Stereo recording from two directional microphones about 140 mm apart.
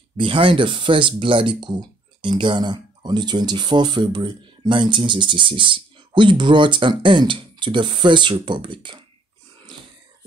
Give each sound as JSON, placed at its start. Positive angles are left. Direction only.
{"t": 0.2, "sound": "speech", "side_deg": -35}